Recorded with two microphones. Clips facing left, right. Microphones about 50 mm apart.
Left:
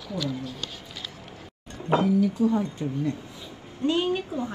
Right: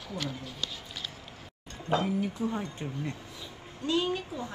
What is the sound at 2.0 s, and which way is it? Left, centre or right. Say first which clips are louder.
Speech: left 9 dB; right.